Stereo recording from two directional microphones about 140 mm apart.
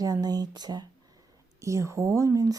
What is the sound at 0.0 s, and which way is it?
Speech, 25° right (ahead or behind).